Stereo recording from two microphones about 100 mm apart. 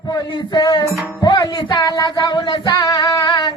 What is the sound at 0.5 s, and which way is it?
Music, 45° left (ahead or behind).